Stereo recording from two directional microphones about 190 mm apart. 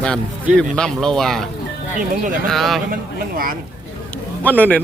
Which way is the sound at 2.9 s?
50° right (ahead or behind).